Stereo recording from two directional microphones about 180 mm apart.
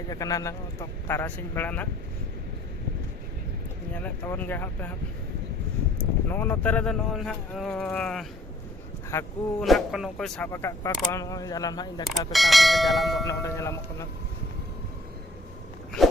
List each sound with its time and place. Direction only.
0.1 s speech: 20° left (ahead or behind)
3.9 s speech: 10° left (ahead or behind)
6.2 s speech: 10° left (ahead or behind)
9.1 s speech: 15° left (ahead or behind)
9.6 s speech: centre (ahead or behind)
10.5 s speech: 15° left (ahead or behind)
12.3 s speech: centre (ahead or behind)
13.2 s speech: 15° left (ahead or behind)
16.0 s a sound: centre (ahead or behind)